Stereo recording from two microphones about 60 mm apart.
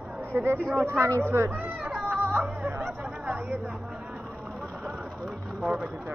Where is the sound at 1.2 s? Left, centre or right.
Right.